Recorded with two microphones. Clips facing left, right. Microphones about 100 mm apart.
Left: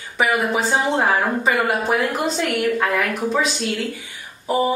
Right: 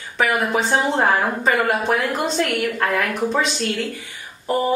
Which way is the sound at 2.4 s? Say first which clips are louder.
Left 2 dB; 20° left (ahead or behind).